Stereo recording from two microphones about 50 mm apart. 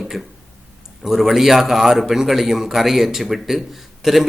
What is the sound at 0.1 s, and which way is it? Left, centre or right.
A man's voice, centre.